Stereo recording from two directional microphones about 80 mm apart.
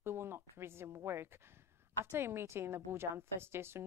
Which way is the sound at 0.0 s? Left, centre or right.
Right.